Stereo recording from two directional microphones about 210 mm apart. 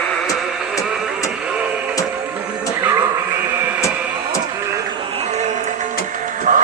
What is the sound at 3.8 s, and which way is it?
Music, 15° left (ahead or behind).